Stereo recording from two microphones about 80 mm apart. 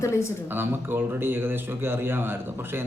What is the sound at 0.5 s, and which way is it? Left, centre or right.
Speech, right.